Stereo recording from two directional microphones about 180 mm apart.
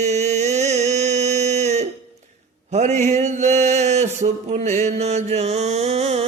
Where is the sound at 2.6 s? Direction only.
40° right (ahead or behind).